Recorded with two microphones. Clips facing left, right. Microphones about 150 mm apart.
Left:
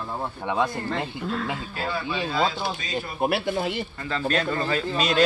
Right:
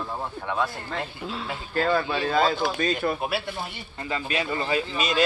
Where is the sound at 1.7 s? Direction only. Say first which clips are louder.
Right 8 dB; 60° right (ahead or behind).